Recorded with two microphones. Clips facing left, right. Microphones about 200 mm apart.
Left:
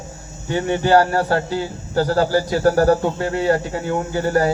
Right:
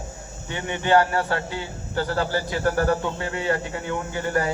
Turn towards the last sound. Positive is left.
turn(degrees=35)  # may be behind; listen again after turning